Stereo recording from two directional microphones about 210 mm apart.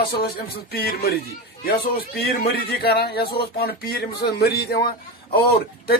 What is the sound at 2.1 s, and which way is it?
Speech, 45° left (ahead or behind).